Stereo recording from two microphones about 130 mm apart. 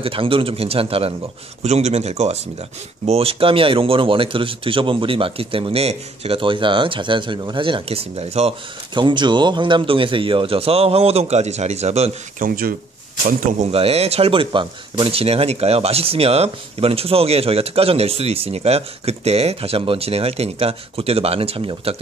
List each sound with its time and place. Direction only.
0.0 s a man's voice: 45° right (ahead or behind)
12.4 s speech: 90° right
13.7 s a man's voice: 50° right (ahead or behind)